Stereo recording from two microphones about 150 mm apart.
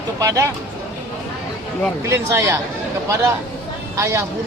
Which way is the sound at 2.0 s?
20° right (ahead or behind).